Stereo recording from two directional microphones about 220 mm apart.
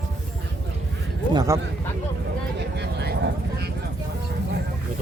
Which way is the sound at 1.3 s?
15° right (ahead or behind).